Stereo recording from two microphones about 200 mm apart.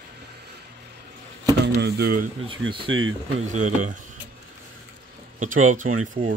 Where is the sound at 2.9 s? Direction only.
85° right.